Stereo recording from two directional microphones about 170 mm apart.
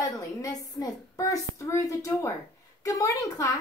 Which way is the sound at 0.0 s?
20° left (ahead or behind).